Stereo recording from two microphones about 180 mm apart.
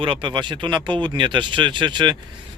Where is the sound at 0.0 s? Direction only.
30° right (ahead or behind).